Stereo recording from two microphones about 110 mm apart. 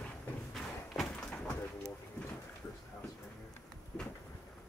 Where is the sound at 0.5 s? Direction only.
5° left (ahead or behind).